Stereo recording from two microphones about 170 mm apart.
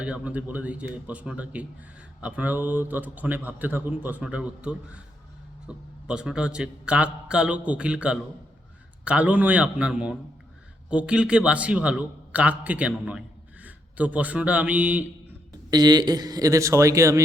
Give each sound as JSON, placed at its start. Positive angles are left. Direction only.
{"t": 0.0, "sound": "a man's voice", "side_deg": -5}
{"t": 15.7, "sound": "a man's voice", "side_deg": -25}